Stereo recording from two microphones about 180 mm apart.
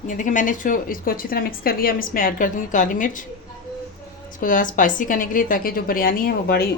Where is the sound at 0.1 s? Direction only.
45° left (ahead or behind).